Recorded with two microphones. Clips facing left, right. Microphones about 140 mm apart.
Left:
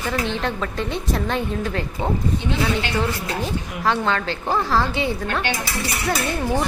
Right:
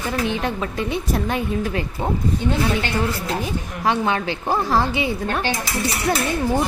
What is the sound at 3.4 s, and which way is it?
A woman's voice, 15° right (ahead or behind).